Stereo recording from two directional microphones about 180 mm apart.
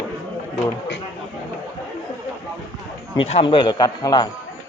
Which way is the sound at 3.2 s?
30° left (ahead or behind).